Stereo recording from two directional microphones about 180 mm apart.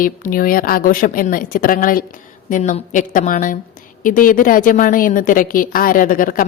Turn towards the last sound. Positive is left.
turn(degrees=50)  # may be behind; listen again after turning